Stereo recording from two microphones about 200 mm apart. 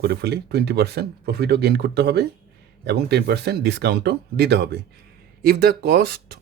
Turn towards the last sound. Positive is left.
turn(degrees=-50)  # may be behind; listen again after turning